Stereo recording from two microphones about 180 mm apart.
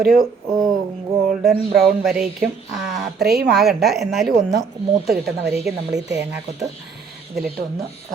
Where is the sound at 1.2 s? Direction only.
Centre (ahead or behind).